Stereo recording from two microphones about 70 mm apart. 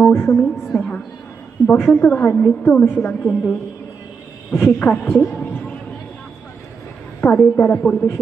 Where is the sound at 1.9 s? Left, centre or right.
Centre.